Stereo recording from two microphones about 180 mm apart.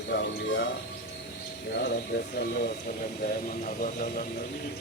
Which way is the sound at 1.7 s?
60° left (ahead or behind).